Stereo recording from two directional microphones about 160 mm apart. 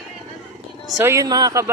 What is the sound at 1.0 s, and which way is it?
Speech, 20° right (ahead or behind).